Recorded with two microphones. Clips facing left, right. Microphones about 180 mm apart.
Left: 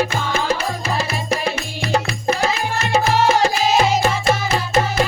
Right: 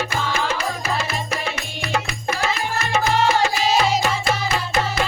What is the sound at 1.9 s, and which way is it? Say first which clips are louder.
Music: left 5 dB; 35° left (ahead or behind).